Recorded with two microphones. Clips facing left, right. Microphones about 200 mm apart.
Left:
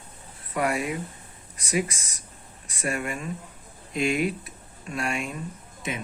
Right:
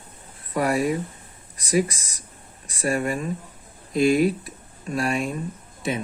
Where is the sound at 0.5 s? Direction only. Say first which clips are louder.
Right 5 dB; 35° right (ahead or behind).